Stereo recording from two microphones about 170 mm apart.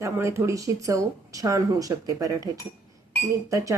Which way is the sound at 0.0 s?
15° right (ahead or behind).